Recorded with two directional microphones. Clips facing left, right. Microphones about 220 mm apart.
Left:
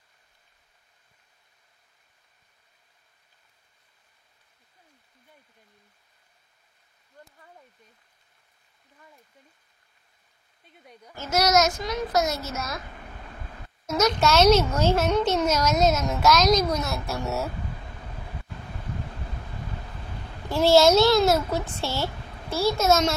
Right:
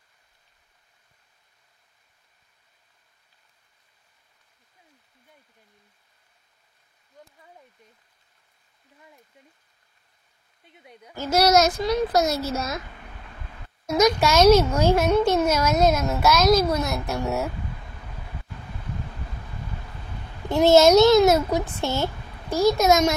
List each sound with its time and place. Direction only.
10.8 s a woman's voice: 5° right (ahead or behind)
11.1 s a child's voice: 35° right (ahead or behind)
13.9 s a woman's voice: 10° right (ahead or behind)
20.4 s a child's voice: 20° right (ahead or behind)